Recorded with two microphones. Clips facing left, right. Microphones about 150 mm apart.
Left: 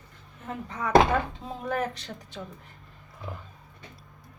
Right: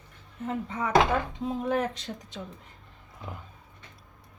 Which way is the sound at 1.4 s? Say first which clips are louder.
Right 3 dB; 15° right (ahead or behind).